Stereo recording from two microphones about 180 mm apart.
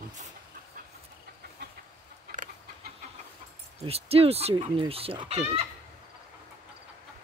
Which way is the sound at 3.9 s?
35° right (ahead or behind).